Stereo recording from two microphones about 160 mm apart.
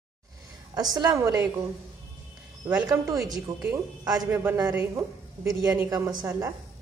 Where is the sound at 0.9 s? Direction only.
20° right (ahead or behind).